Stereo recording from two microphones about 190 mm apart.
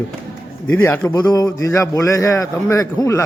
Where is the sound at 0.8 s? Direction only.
10° left (ahead or behind).